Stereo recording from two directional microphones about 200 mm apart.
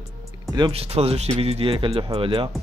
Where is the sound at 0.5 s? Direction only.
25° right (ahead or behind).